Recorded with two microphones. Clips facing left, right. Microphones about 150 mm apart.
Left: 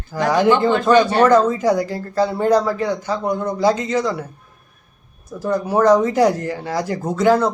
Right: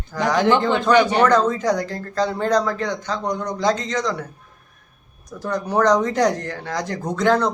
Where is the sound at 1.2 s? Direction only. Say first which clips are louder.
Left 3 dB; 10° left (ahead or behind).